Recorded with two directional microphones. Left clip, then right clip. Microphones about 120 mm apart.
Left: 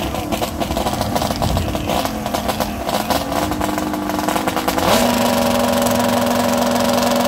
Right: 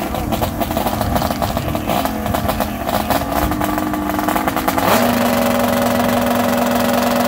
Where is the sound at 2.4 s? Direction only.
10° left (ahead or behind).